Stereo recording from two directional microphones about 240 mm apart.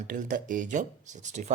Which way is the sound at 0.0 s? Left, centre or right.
Right.